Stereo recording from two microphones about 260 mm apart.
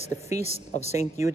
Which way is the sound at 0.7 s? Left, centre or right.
Left.